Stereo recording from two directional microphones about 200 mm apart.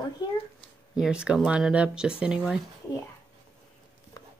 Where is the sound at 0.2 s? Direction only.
20° left (ahead or behind).